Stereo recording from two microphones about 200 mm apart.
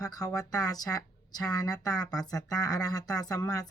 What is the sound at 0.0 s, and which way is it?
Speech, 20° left (ahead or behind).